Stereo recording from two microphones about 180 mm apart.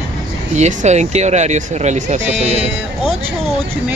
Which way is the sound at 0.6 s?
40° right (ahead or behind).